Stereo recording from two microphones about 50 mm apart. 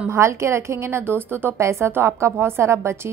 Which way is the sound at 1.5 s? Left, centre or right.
Right.